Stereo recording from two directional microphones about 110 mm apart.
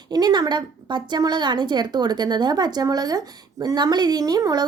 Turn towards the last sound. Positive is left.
turn(degrees=-35)  # may be behind; listen again after turning